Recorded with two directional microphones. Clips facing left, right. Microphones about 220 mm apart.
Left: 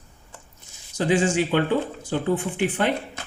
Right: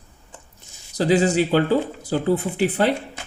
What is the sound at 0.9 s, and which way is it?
Speech, 35° right (ahead or behind).